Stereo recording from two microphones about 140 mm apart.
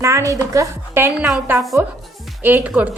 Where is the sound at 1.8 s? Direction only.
15° right (ahead or behind).